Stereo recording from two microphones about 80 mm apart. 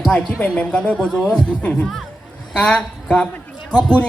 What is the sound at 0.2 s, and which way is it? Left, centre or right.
A man's voice, centre.